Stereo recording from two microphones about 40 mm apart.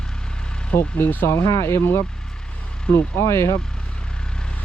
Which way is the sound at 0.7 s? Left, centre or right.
Left.